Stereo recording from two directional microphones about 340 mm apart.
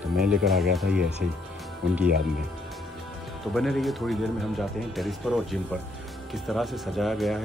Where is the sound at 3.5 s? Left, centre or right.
Centre.